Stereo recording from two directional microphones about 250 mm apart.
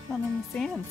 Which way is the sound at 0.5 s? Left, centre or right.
Centre.